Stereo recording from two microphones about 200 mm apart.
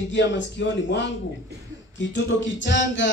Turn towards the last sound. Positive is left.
turn(degrees=65)  # may be behind; listen again after turning